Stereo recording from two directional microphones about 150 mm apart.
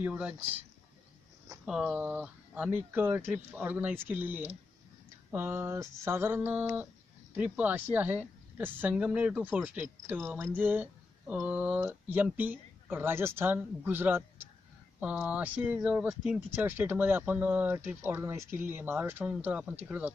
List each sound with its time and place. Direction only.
0.0 s a woman's voice: 10° right (ahead or behind)
1.6 s a woman's voice: 5° right (ahead or behind)